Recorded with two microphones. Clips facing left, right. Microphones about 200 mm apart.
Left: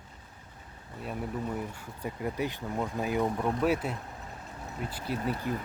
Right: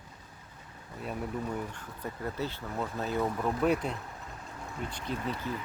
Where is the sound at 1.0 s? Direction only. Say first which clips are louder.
Even; 5° left (ahead or behind).